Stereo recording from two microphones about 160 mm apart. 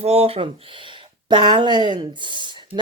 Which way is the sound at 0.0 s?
40° right (ahead or behind).